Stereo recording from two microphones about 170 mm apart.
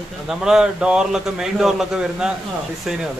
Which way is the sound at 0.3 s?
5° right (ahead or behind).